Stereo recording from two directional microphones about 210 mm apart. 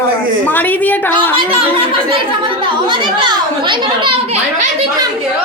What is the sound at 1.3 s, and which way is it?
A child's voice, 25° right (ahead or behind).